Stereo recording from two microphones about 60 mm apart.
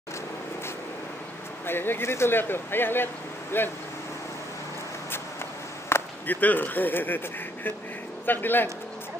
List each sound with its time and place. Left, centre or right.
1.7 s speech: left
5.9 s chop: left
6.2 s speech: left
8.3 s speech: left